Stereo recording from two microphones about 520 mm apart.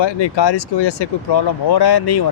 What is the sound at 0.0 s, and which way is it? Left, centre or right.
Speech, left.